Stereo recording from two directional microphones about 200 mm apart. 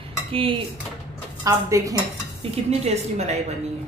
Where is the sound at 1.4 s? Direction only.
15° right (ahead or behind).